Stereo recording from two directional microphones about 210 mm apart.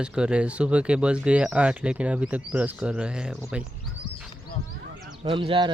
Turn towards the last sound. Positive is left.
turn(degrees=-25)  # may be behind; listen again after turning